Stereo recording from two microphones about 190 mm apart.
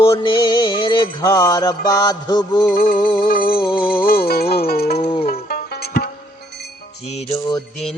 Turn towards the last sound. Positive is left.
turn(degrees=25)  # may be behind; listen again after turning